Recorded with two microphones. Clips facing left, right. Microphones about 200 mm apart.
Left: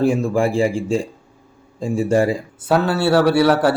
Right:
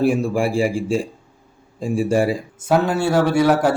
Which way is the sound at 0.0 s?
15° right (ahead or behind).